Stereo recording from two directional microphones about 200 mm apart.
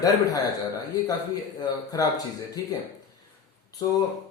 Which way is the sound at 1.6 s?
20° left (ahead or behind).